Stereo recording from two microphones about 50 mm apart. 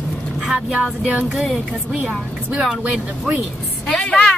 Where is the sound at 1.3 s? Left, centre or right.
Centre.